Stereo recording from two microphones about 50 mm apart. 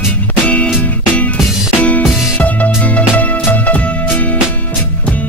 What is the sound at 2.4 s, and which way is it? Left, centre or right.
Music, left.